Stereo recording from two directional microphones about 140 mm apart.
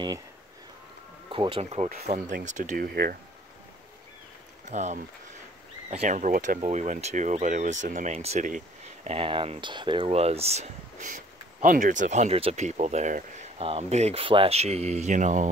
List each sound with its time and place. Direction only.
1.3 s speech: 40° right (ahead or behind)
2.1 s speech: 65° right (ahead or behind); by 3.2 s 90° right
4.6 s speech: 55° right (ahead or behind)
9.1 s speech: 40° right (ahead or behind); by 13.5 s 55° right (ahead or behind)
13.6 s speech: 45° right (ahead or behind); by 15.5 s 60° right (ahead or behind)